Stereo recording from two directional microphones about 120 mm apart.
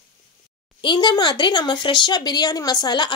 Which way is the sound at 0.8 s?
40° left (ahead or behind).